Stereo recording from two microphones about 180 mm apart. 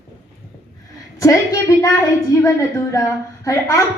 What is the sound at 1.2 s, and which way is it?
Child singing, 20° left (ahead or behind).